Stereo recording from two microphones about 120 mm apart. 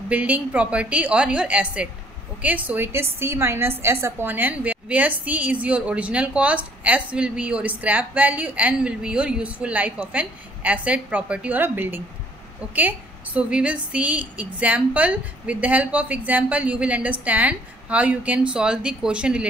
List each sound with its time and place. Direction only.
0.1 s a woman's voice: 15° right (ahead or behind)